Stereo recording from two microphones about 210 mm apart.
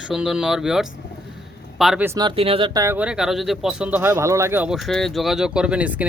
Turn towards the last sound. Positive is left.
turn(degrees=-5)  # may be behind; listen again after turning